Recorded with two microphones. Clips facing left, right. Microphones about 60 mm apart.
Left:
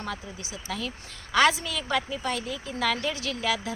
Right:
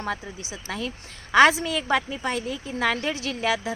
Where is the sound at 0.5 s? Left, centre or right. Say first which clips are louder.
Right 2 dB; right.